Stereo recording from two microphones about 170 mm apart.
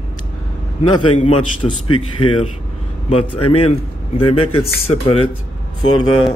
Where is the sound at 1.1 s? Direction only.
35° left (ahead or behind).